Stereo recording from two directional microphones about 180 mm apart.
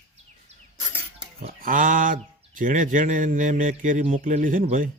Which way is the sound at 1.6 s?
50° right (ahead or behind).